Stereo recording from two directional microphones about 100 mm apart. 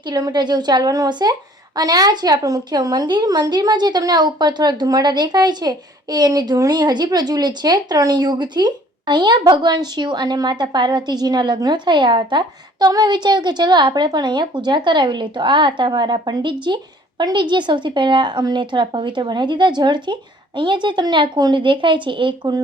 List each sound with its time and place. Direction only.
0.0 s a woman's voice: 45° right (ahead or behind)